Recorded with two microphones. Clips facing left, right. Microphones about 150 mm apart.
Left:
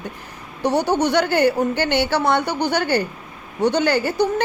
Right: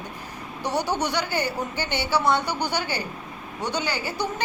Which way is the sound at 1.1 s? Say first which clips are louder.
Left 9 dB; 65° left (ahead or behind).